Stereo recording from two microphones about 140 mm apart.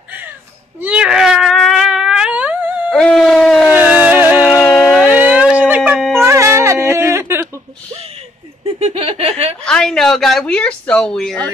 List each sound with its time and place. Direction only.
0.7 s cat: 10° right (ahead or behind)
2.9 s a sound: 5° left (ahead or behind)
3.7 s music: 10° right (ahead or behind)
4.6 s a sound: 5° left (ahead or behind)
5.0 s a sound: 10° right (ahead or behind)
5.9 s wind instrument: centre (ahead or behind)
6.2 s music: 20° right (ahead or behind)
8.7 s laughter: 45° right (ahead or behind)
9.7 s speech: 5° left (ahead or behind)